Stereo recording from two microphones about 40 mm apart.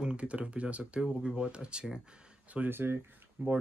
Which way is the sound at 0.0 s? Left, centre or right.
Right.